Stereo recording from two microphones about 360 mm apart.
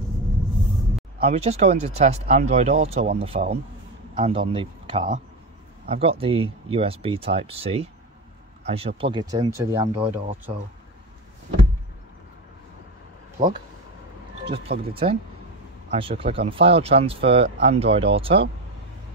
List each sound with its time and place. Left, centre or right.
1.2 s a man's voice: centre
14.5 s speech: centre